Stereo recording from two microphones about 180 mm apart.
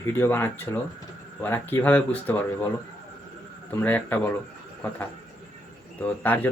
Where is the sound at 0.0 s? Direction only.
10° left (ahead or behind).